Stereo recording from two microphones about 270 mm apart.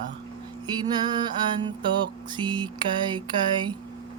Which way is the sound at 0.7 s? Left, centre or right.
Centre.